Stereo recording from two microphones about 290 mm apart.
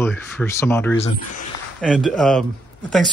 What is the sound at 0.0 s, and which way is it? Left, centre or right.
Speech, centre.